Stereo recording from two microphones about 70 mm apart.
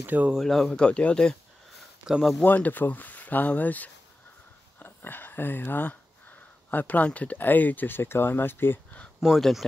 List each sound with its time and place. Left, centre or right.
0.0 s speech: right
0.4 s speech: centre
0.8 s speech: centre
2.0 s speech: centre
2.4 s speech: left
9.2 s speech: centre